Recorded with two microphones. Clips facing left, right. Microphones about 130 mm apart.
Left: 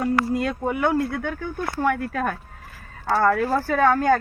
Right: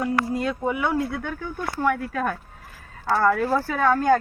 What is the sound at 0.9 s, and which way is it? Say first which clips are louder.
Speech: left 2 dB; 10° right (ahead or behind).